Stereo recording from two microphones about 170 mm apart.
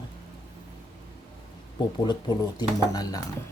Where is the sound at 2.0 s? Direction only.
25° left (ahead or behind).